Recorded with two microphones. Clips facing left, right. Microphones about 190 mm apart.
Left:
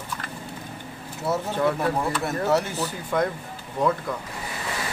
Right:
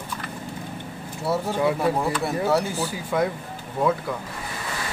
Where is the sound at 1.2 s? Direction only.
10° right (ahead or behind).